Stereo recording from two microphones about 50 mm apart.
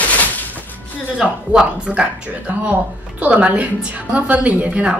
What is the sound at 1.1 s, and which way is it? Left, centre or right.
Speech, centre.